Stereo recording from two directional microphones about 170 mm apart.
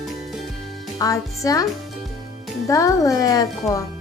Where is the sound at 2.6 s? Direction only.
20° left (ahead or behind).